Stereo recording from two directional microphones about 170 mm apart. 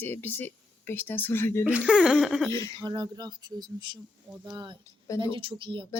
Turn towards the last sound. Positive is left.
turn(degrees=-30)  # may be behind; listen again after turning